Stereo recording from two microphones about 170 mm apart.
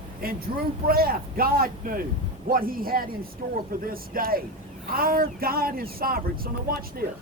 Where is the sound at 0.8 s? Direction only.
60° right (ahead or behind).